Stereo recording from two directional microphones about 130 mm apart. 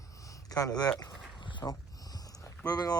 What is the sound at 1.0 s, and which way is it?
Dog, 35° left (ahead or behind).